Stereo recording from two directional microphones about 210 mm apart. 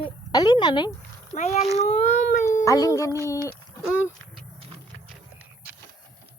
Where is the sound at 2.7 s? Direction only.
15° left (ahead or behind).